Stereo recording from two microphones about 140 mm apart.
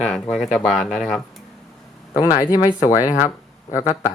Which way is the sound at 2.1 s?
25° left (ahead or behind).